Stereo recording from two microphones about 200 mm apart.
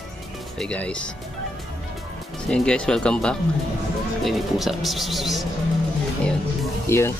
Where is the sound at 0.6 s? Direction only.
5° left (ahead or behind).